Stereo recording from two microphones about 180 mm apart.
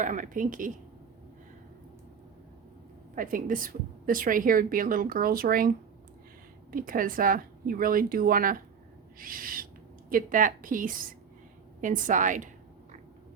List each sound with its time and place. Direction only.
0.0 s a woman's voice: 45° right (ahead or behind)
3.2 s a woman's voice: 50° right (ahead or behind)